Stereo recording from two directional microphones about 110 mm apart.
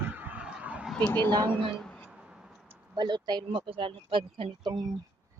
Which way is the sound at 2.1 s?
5° right (ahead or behind).